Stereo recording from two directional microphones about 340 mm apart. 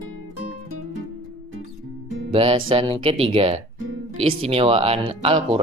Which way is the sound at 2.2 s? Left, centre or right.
Centre.